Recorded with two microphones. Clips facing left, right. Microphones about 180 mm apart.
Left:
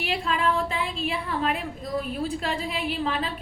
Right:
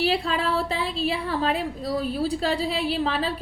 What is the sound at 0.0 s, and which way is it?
A woman's voice, 35° right (ahead or behind).